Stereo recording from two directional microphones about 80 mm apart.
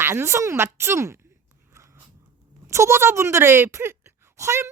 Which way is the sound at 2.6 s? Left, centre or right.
Right.